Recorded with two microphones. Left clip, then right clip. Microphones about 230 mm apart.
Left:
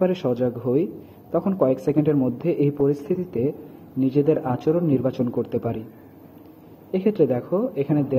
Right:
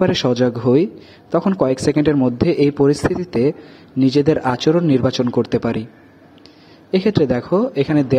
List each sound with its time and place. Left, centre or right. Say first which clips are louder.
0.0 s speech: right 6 dB; right
6.9 s speech: right 4 dB; right